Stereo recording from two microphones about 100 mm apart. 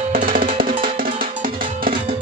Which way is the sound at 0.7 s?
60° right (ahead or behind).